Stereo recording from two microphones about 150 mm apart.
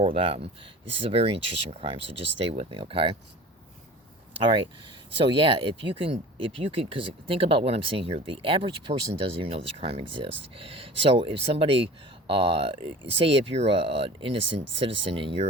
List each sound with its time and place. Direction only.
0.0 s speech: 35° right (ahead or behind)
4.4 s speech: 35° right (ahead or behind)